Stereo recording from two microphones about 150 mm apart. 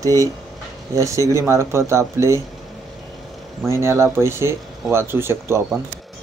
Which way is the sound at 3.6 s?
20° right (ahead or behind).